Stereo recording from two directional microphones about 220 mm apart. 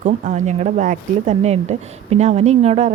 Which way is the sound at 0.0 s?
35° right (ahead or behind).